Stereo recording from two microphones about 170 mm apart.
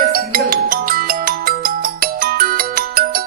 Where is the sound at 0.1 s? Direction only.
60° right (ahead or behind).